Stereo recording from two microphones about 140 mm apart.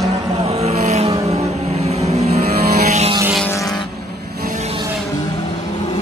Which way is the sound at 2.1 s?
50° right (ahead or behind).